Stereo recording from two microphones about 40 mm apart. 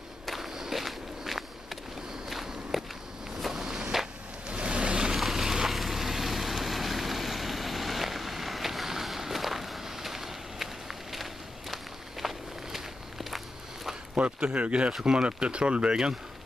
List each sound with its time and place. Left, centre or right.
0.3 s walk: centre
4.5 s vehicle: right
5.1 s vehicle: centre
11.7 s walk: centre
14.1 s speech: right